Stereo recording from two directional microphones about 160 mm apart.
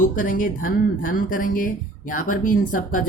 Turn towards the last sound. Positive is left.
turn(degrees=55)  # may be behind; listen again after turning